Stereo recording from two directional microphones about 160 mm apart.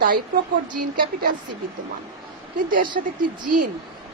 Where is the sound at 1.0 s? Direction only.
75° right (ahead or behind).